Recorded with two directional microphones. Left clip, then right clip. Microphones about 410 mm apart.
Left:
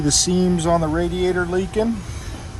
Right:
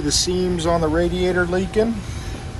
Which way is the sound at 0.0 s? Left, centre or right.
Left.